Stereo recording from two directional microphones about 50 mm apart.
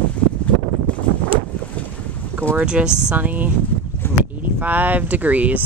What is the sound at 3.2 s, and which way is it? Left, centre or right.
Speech, right.